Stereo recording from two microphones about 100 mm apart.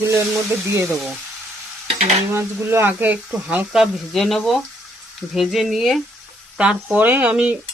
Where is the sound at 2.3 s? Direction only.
25° right (ahead or behind); by 6.0 s centre (ahead or behind).